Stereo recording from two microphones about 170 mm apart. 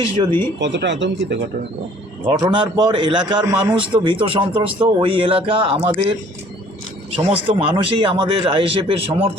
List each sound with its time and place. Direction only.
0.2 s a man's voice: 30° right (ahead or behind)
0.6 s speech: 90° right
2.4 s a man's voice: 25° right (ahead or behind)
7.2 s a man's voice: 35° right (ahead or behind)